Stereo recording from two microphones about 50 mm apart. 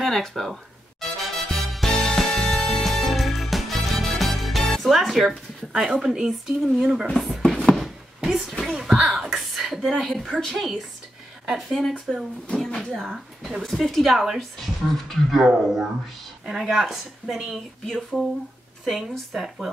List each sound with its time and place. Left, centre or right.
0.0 s speech: centre
1.2 s music: centre
1.9 s music: centre
2.8 s music: centre
5.9 s speech: centre
7.1 s speech: centre
7.4 s a sound: centre
7.8 s chopping: centre
8.7 s speech: centre
9.3 s a sound: centre
10.4 s a woman's voice: centre
13.0 s a woman's voice: centre
14.6 s a woman's voice: centre
15.4 s a woman's voice: centre